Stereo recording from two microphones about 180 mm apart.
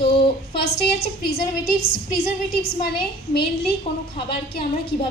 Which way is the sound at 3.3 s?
60° left (ahead or behind).